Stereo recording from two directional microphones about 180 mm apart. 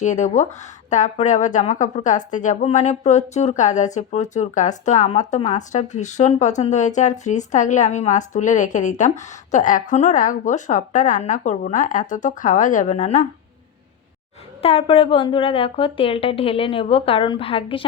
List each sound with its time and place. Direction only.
0.0 s speech: 40° left (ahead or behind)
14.6 s speech: 30° left (ahead or behind)